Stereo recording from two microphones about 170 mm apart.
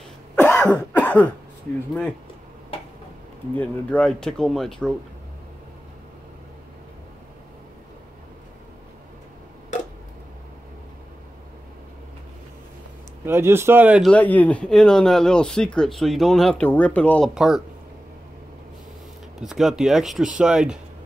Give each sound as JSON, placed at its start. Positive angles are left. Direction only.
{"t": 0.4, "sound": "cough", "side_deg": 10}
{"t": 3.5, "sound": "speech", "side_deg": 5}
{"t": 9.7, "sound": "tick-tock", "side_deg": 45}
{"t": 13.2, "sound": "speech", "side_deg": -15}
{"t": 14.0, "sound": "speech", "side_deg": 10}
{"t": 17.3, "sound": "speech", "side_deg": 0}
{"t": 19.4, "sound": "speech", "side_deg": 0}